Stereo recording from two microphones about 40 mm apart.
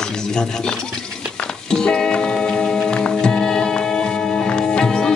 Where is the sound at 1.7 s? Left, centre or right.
Centre.